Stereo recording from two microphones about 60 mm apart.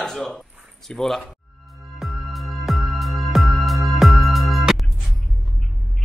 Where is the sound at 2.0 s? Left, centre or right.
Centre.